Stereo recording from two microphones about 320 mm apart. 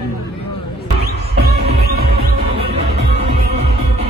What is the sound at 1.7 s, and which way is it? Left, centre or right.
Music, right.